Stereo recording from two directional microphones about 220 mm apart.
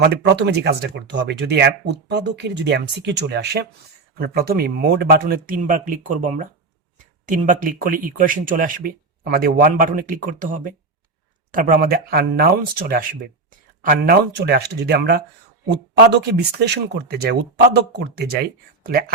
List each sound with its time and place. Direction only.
0.0 s speech: 50° right (ahead or behind)